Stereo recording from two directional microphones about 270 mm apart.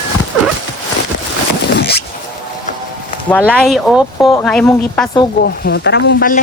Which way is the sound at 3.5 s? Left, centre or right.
Centre.